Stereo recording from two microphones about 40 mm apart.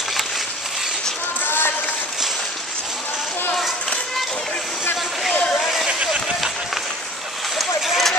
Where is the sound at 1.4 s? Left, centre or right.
Left.